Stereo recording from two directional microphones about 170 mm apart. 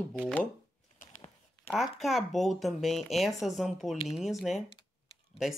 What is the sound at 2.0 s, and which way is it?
Speech, centre (ahead or behind).